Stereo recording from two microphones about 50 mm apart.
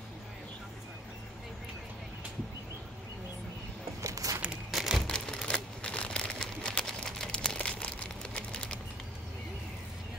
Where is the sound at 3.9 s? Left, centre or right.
Right.